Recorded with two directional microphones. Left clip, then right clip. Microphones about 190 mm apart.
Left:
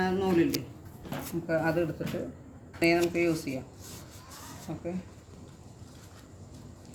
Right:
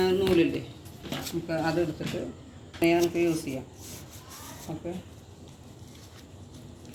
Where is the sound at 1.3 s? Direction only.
20° left (ahead or behind).